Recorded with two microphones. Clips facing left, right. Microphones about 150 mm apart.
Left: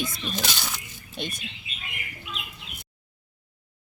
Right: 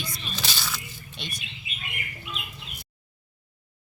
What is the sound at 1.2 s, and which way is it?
Speech, 45° left (ahead or behind).